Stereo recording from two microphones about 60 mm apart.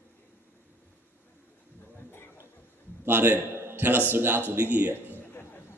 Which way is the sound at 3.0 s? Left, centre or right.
Right.